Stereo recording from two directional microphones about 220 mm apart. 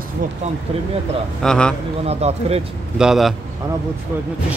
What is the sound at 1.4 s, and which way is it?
Speech, 5° left (ahead or behind).